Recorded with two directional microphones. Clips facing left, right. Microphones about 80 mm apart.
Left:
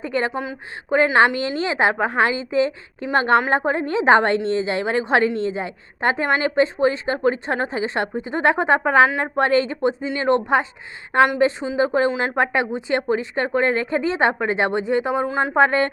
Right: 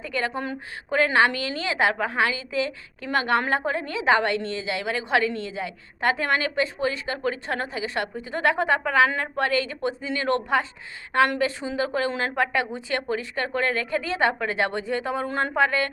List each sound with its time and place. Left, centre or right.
0.0 s a woman's voice: left
15.3 s speech: centre
15.5 s a woman's voice: left